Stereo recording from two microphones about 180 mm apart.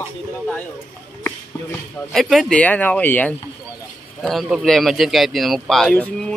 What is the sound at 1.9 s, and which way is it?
Speech, centre (ahead or behind).